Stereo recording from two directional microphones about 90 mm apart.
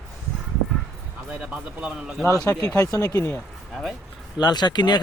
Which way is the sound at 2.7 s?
35° left (ahead or behind).